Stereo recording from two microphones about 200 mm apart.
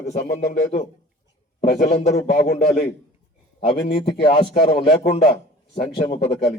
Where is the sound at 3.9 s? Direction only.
50° left (ahead or behind).